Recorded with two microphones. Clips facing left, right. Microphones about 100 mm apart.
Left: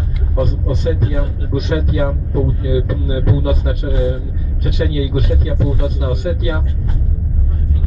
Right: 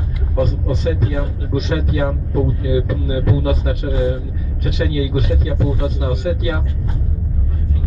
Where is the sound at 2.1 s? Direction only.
Centre (ahead or behind).